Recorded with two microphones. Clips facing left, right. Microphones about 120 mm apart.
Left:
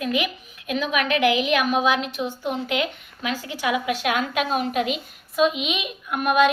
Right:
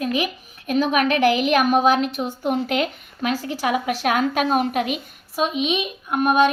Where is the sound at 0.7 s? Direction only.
40° right (ahead or behind).